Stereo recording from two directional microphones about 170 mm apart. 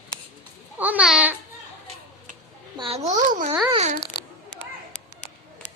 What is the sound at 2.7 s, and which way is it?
Speech, 35° right (ahead or behind).